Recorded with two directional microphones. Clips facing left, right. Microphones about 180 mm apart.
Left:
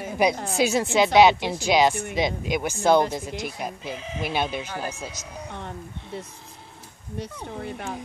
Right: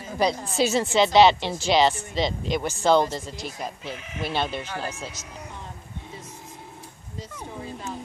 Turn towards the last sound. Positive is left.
turn(degrees=65)  # may be behind; listen again after turning